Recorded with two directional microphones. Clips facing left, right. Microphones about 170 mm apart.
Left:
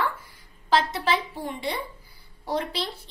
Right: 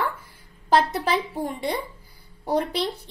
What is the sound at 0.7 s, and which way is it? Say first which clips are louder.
A woman's voice: right 3 dB; 45° right (ahead or behind).